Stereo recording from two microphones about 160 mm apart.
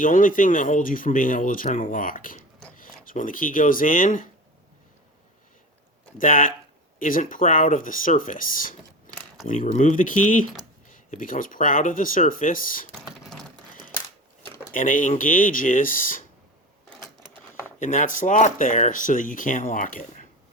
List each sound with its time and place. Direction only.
0.0 s speech: 55° left (ahead or behind)
6.1 s speech: 55° left (ahead or behind)
14.7 s speech: 55° left (ahead or behind)
17.7 s speech: 50° left (ahead or behind)